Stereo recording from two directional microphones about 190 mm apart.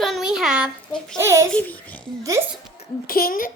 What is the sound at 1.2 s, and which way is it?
Speech, 15° right (ahead or behind).